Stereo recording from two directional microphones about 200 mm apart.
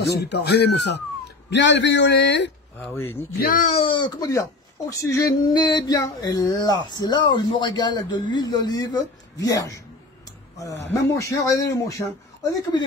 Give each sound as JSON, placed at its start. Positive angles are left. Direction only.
{"t": 0.0, "sound": "speech", "side_deg": 55}
{"t": 2.8, "sound": "speech", "side_deg": 10}
{"t": 3.3, "sound": "speech", "side_deg": 45}
{"t": 3.7, "sound": "speech", "side_deg": 25}
{"t": 10.9, "sound": "speech", "side_deg": 15}
{"t": 12.7, "sound": "speech", "side_deg": 20}